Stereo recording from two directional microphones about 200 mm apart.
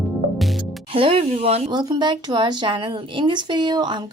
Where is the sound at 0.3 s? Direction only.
Centre (ahead or behind).